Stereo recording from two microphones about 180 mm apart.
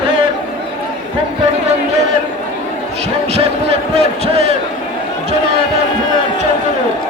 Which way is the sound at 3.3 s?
35° right (ahead or behind).